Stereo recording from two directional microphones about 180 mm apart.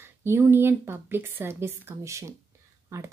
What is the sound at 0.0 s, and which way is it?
A woman's voice, 15° right (ahead or behind).